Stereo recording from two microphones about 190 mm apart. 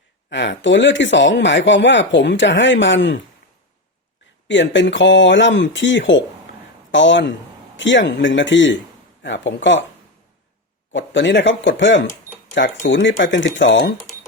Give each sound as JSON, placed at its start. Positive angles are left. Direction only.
{"t": 0.3, "sound": "speech", "side_deg": 70}
{"t": 4.4, "sound": "speech", "side_deg": 70}
{"t": 10.9, "sound": "speech", "side_deg": 75}